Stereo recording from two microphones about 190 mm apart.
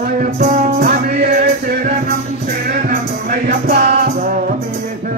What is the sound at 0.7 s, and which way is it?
Music, 55° right (ahead or behind).